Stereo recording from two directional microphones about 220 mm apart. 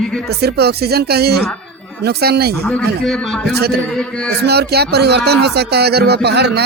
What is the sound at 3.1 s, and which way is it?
Speech, centre (ahead or behind).